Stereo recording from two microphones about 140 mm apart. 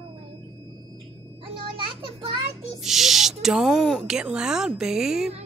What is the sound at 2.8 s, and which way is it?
A woman's voice, centre (ahead or behind).